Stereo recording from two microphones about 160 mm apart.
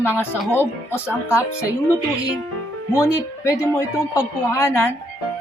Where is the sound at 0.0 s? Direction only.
15° left (ahead or behind).